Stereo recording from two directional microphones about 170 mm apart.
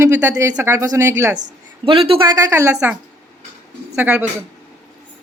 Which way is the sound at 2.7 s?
10° right (ahead or behind).